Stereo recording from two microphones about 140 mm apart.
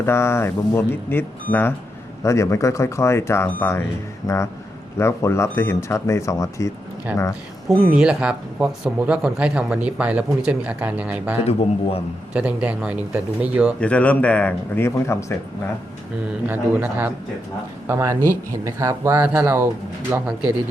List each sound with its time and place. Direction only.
0.0 s speech: 20° left (ahead or behind)
7.1 s speech: 10° right (ahead or behind)
11.4 s speech: 45° left (ahead or behind)
12.3 s speech: 10° right (ahead or behind)
13.7 s speech: 10° left (ahead or behind)
16.5 s speech: 15° right (ahead or behind)